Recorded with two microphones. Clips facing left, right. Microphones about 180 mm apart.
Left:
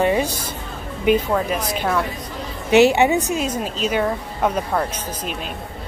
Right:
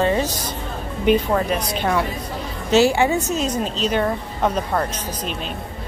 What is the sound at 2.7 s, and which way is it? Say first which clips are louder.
Speech: left 2 dB; 20° left (ahead or behind).